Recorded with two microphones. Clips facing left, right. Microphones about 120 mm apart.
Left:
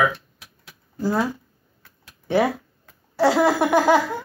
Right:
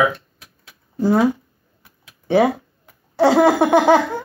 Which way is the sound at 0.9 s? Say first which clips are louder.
Right 7 dB; 20° right (ahead or behind).